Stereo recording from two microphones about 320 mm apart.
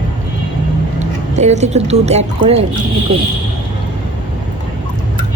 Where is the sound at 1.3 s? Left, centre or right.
Right.